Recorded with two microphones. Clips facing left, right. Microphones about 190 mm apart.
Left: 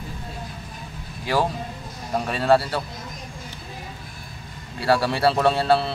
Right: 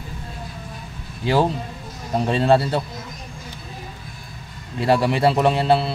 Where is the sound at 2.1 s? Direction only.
25° right (ahead or behind).